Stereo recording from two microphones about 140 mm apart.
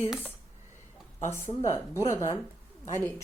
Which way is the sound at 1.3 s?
20° left (ahead or behind).